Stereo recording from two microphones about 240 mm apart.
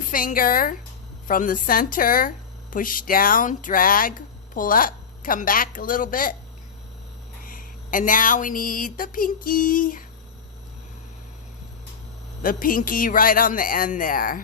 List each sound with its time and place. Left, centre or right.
0.1 s a woman's voice: left
7.4 s speech: left
12.4 s a woman's voice: left